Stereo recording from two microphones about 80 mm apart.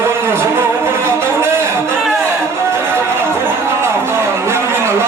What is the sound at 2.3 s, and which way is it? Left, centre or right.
Music, right.